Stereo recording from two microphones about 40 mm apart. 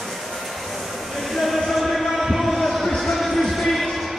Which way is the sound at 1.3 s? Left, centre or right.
Centre.